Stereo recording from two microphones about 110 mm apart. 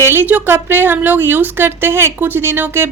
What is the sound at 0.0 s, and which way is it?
A woman's voice, 20° right (ahead or behind).